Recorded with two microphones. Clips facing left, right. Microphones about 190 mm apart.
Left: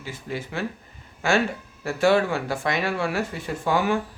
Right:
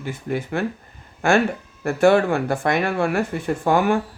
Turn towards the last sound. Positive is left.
turn(degrees=-50)  # may be behind; listen again after turning